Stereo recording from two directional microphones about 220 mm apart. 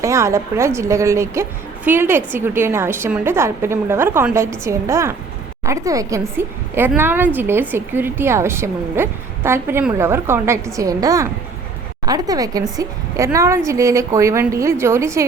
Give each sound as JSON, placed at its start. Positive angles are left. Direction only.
{"t": 0.0, "sound": "a woman's voice", "side_deg": -15}